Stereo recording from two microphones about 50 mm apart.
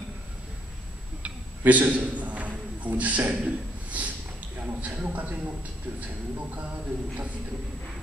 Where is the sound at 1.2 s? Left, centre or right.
Right.